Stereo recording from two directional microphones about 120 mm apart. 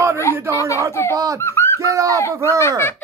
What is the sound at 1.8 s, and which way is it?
Bird, 25° right (ahead or behind).